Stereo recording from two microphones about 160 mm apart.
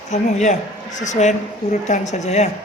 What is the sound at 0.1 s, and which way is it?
Speech, 45° left (ahead or behind).